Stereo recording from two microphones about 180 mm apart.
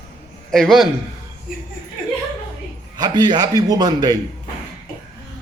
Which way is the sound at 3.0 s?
20° right (ahead or behind).